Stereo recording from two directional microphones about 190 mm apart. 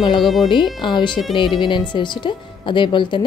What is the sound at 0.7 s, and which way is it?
Speech, 25° left (ahead or behind).